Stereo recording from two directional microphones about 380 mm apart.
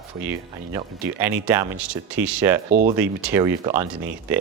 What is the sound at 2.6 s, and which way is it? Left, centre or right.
Speech, right.